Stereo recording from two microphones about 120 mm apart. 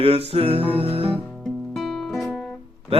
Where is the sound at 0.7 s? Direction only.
55° right (ahead or behind).